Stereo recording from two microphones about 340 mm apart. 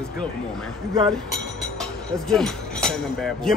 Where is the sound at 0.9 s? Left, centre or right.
Centre.